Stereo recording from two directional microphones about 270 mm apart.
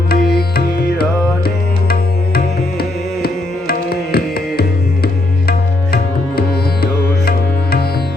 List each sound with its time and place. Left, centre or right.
0.1 s music: left